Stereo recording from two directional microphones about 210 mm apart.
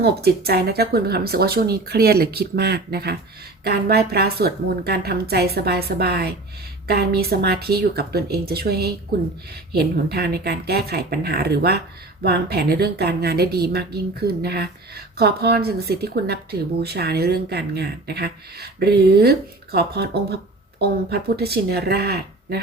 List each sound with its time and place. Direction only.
0.0 s speech: 50° right (ahead or behind)